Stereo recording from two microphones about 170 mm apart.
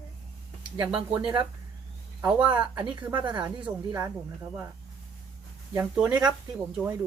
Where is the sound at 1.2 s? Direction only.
30° right (ahead or behind).